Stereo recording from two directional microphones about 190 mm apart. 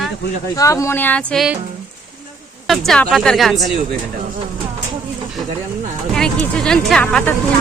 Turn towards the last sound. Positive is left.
turn(degrees=5)  # may be behind; listen again after turning